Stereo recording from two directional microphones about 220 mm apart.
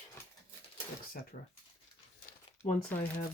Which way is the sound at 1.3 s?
35° left (ahead or behind).